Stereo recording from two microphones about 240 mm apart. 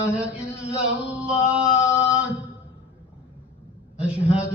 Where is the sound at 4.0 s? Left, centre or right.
Centre.